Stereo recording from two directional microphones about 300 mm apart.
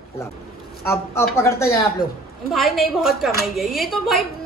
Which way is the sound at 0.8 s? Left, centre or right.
Centre.